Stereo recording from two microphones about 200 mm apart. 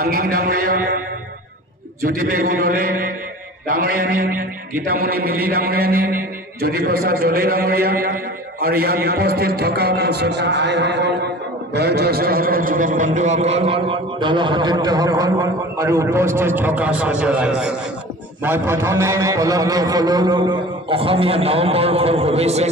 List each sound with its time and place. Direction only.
0.0 s a man's voice: 50° right (ahead or behind)
2.0 s a man's voice: 45° right (ahead or behind)